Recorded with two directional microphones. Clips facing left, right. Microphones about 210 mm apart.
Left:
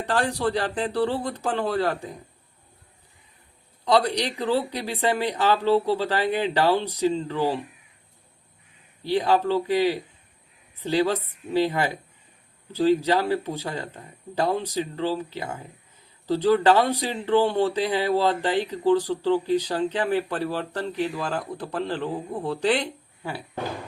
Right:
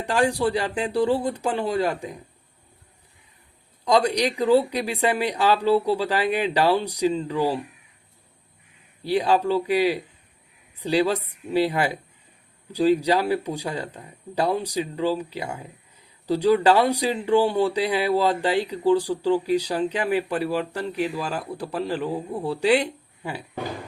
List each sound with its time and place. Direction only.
0.0 s speech: 10° right (ahead or behind)
3.8 s speech: 15° right (ahead or behind)
9.0 s speech: 15° right (ahead or behind)